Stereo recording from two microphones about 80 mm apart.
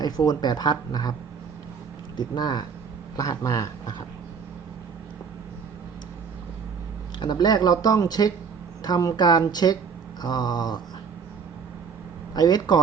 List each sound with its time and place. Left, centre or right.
0.0 s speech: left
2.1 s speech: left
3.2 s speech: left
7.2 s speech: left
12.3 s speech: left